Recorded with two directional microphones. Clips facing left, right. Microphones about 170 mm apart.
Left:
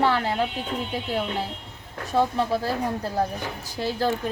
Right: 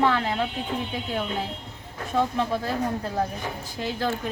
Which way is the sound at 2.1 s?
35° left (ahead or behind).